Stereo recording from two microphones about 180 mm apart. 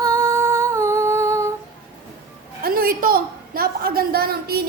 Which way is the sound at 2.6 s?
55° right (ahead or behind).